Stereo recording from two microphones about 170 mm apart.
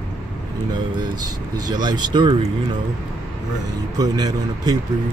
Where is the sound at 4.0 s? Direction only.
25° right (ahead or behind).